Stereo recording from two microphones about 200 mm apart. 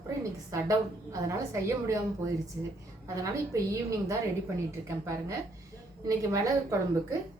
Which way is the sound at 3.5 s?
15° right (ahead or behind).